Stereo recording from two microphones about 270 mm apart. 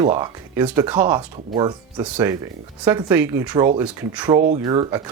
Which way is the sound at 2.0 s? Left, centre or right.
Centre.